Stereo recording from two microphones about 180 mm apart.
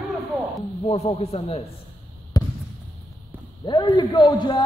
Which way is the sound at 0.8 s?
35° left (ahead or behind).